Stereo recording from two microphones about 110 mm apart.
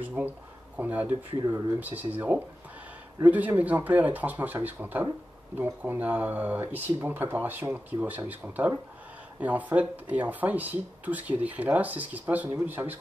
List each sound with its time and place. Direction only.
0.2 s speech: 15° right (ahead or behind)